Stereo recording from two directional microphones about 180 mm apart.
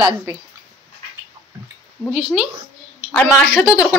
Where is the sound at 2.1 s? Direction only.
5° right (ahead or behind).